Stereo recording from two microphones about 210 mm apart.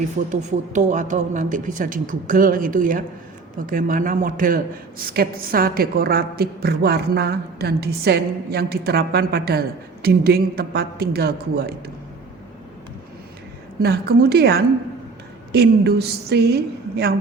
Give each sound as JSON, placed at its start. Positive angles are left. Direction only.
{"t": 0.3, "sound": "a man's voice", "side_deg": -35}
{"t": 13.8, "sound": "a man's voice", "side_deg": -50}